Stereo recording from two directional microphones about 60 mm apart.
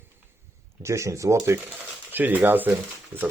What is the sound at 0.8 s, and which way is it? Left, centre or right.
Speech, right.